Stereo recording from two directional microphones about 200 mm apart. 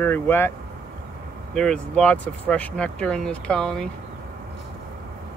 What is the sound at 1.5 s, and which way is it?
Speech, 5° left (ahead or behind).